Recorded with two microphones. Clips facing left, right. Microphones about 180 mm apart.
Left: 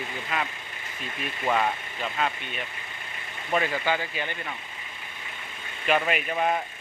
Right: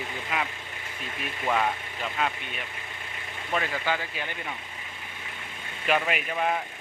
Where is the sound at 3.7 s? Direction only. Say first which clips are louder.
Left 2 dB; centre (ahead or behind).